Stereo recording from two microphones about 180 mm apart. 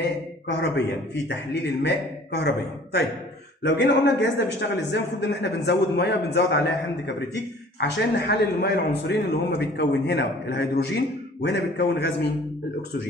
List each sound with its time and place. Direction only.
0.5 s speech: 70° left (ahead or behind)
3.6 s a man's voice: 80° left